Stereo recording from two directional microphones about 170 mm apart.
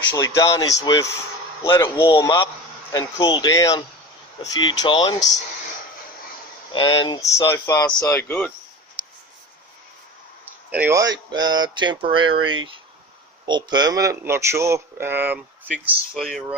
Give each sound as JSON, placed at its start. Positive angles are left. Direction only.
{"t": 0.1, "sound": "speech", "side_deg": 20}
{"t": 6.7, "sound": "speech", "side_deg": 30}
{"t": 10.7, "sound": "speech", "side_deg": -10}